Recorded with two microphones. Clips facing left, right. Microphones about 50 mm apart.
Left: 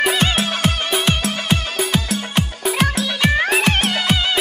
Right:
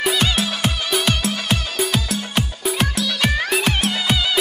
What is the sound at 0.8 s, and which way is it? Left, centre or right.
Music, centre.